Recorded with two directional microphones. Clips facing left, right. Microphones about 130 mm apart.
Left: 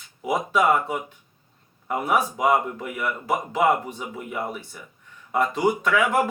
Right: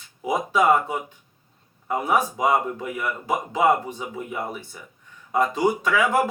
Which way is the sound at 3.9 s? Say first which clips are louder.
Right 1 dB; 25° right (ahead or behind).